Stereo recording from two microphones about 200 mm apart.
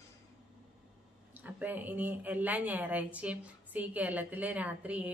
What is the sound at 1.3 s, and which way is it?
Speech, 10° right (ahead or behind).